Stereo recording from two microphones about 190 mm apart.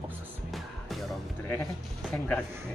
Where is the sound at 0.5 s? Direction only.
Centre (ahead or behind).